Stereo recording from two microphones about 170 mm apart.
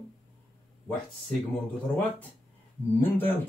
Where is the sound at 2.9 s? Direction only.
10° left (ahead or behind).